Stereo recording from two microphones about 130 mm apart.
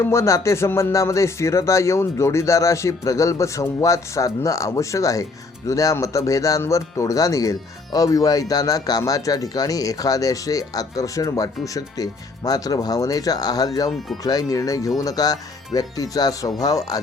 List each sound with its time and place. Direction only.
0.0 s music: 20° left (ahead or behind)